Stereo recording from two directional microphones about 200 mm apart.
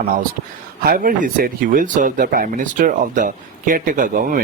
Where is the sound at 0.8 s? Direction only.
45° right (ahead or behind).